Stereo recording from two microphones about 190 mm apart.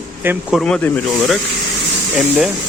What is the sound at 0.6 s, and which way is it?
Speech, 5° left (ahead or behind).